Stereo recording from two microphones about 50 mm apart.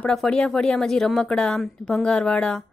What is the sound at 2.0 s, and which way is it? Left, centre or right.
Speech, centre.